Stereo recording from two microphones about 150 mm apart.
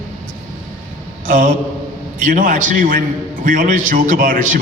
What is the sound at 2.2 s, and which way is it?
A man's voice, 65° right (ahead or behind).